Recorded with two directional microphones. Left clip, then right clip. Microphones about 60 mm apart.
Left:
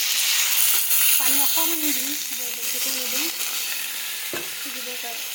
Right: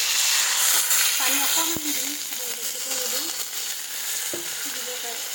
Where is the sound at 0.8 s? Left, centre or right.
Centre.